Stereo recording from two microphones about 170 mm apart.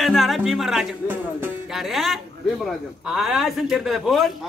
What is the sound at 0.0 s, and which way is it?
A man's voice, centre (ahead or behind).